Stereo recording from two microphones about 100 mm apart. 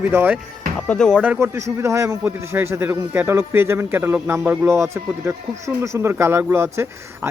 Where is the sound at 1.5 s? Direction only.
30° right (ahead or behind).